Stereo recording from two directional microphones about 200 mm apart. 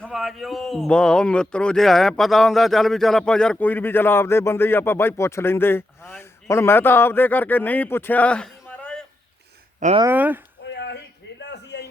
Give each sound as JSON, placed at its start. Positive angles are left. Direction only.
{"t": 0.0, "sound": "speech", "side_deg": 0}
{"t": 10.0, "sound": "speech", "side_deg": -10}
{"t": 10.6, "sound": "a sound", "side_deg": 60}